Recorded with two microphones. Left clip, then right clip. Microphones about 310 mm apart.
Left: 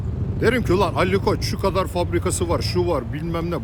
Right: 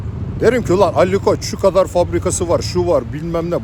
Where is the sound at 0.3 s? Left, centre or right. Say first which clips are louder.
Right 6 dB; centre.